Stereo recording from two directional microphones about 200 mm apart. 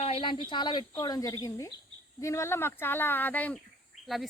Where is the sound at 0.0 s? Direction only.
25° left (ahead or behind); by 3.6 s 10° left (ahead or behind).